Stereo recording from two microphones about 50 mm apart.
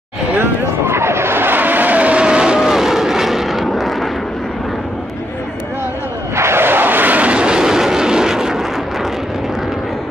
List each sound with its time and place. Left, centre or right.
0.4 s vehicle: right
2.2 s vehicle: centre
6.3 s vehicle: right; by 8.5 s centre